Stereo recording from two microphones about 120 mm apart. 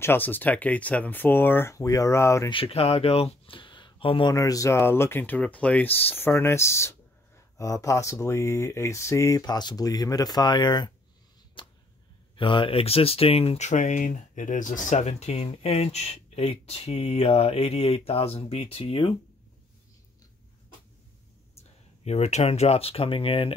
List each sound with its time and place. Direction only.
0.0 s speech: 15° left (ahead or behind)
2.5 s speech: 55° left (ahead or behind)
4.3 s speech: 30° left (ahead or behind)
9.4 s speech: 35° left (ahead or behind)
11.6 s arrow: 40° left (ahead or behind)
12.4 s speech: 45° left (ahead or behind)
21.5 s speech: 65° left (ahead or behind)